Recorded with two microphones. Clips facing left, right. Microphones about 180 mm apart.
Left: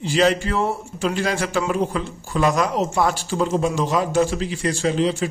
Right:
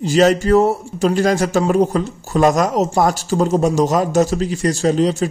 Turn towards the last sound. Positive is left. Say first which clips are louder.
# right 4 dB
turn(degrees=-40)  # may be behind; listen again after turning